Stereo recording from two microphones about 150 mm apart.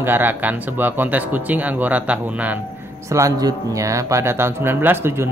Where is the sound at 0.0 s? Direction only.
15° right (ahead or behind).